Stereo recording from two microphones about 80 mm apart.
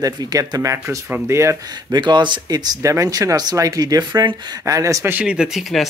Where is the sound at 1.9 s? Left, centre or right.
Right.